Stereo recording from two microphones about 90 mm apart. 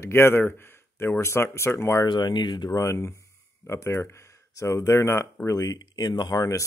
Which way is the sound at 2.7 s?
35° left (ahead or behind).